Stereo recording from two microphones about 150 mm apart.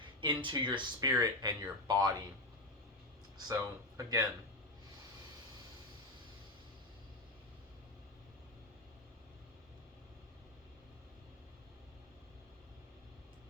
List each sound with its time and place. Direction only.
0.0 s speech: 35° right (ahead or behind)
3.3 s speech: 25° right (ahead or behind)